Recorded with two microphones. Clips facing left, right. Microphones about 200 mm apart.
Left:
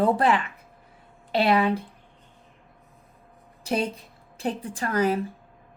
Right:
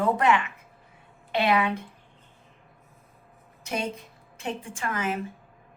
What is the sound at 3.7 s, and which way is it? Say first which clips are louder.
A woman's voice: left 4 dB; 35° left (ahead or behind).